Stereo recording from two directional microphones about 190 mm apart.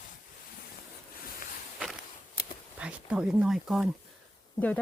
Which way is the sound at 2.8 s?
5° right (ahead or behind).